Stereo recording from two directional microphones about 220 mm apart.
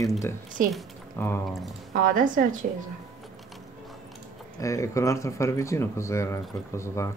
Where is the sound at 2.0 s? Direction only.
35° right (ahead or behind).